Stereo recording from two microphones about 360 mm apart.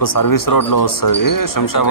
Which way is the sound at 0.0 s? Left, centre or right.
Left.